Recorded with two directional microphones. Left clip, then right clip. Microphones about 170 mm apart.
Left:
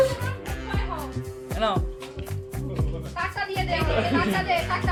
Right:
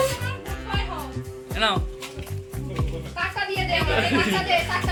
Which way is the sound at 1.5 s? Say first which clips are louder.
Right 2 dB; 15° left (ahead or behind).